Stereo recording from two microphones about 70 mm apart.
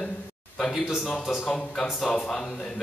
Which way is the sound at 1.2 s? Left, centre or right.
Centre.